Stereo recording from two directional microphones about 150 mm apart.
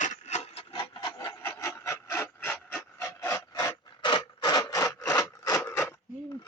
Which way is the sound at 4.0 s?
30° left (ahead or behind).